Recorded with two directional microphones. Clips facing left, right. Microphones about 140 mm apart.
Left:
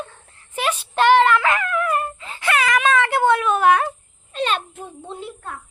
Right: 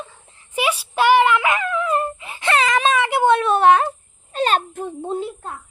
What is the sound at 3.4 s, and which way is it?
Speech, 35° right (ahead or behind).